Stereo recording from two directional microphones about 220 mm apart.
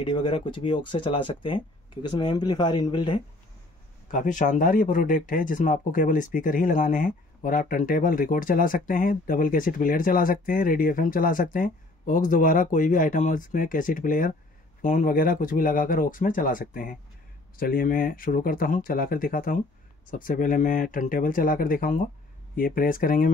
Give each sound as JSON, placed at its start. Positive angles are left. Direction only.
{"t": 0.0, "sound": "speech", "side_deg": 25}
{"t": 4.1, "sound": "speech", "side_deg": 35}